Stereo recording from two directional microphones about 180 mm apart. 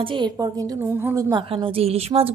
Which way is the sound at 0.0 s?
25° right (ahead or behind).